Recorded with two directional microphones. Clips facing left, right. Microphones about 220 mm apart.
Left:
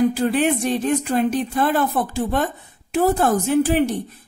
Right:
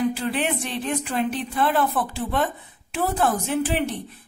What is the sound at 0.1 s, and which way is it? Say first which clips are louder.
Speech: left 6 dB; 45° left (ahead or behind).